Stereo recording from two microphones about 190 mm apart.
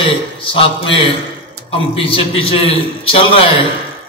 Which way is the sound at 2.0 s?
30° left (ahead or behind).